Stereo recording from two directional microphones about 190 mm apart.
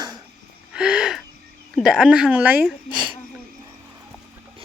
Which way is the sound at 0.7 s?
5° right (ahead or behind).